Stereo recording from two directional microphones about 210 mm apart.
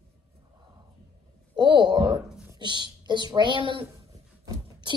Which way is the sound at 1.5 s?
20° right (ahead or behind).